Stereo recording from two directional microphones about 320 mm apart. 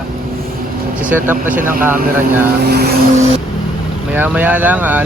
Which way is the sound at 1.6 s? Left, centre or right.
Right.